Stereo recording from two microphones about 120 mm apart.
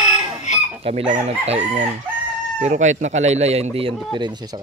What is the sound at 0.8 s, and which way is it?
Speech, 55° right (ahead or behind).